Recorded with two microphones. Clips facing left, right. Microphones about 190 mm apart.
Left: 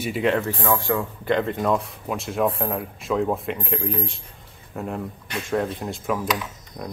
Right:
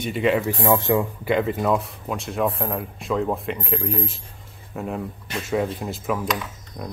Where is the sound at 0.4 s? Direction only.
15° right (ahead or behind).